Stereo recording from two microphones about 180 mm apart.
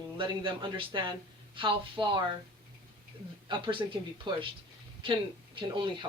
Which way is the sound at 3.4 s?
25° right (ahead or behind).